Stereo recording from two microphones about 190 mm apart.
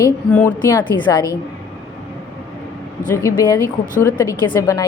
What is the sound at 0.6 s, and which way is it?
Speech, 20° left (ahead or behind).